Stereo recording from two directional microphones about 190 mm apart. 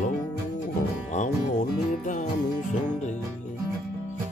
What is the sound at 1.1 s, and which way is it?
Music, 40° left (ahead or behind).